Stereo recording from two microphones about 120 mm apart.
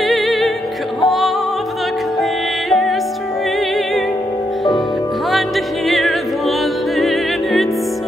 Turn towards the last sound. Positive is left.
turn(degrees=0)  # may be behind; listen again after turning